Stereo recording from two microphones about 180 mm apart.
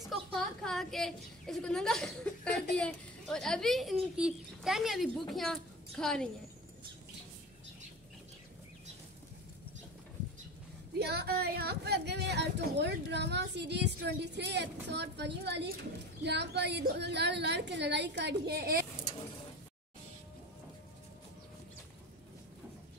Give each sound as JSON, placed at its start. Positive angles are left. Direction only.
{"t": 0.1, "sound": "a woman's voice", "side_deg": 0}
{"t": 11.0, "sound": "speech", "side_deg": -65}